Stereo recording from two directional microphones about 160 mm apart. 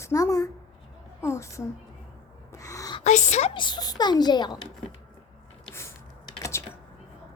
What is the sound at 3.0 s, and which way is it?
Speech, 45° left (ahead or behind).